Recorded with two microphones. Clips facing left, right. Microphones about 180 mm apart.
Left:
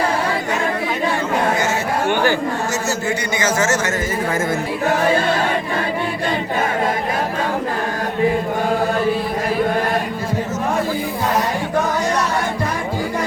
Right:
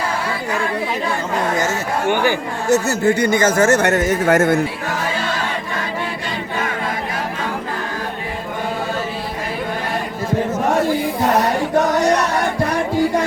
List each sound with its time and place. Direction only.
2.6 s speech: 60° right (ahead or behind)